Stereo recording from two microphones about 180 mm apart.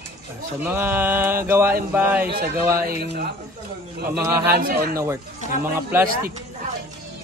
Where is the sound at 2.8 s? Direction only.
65° right (ahead or behind).